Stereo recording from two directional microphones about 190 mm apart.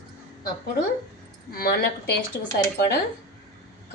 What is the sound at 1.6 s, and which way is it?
Speech, 55° left (ahead or behind).